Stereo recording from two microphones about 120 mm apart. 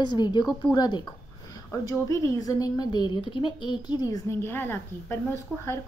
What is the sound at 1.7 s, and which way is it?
A woman's voice, 25° left (ahead or behind).